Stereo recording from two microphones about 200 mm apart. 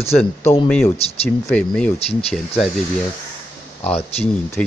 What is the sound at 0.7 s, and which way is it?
Speech, 5° left (ahead or behind).